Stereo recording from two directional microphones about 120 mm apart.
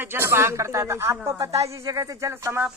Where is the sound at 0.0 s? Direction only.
20° right (ahead or behind).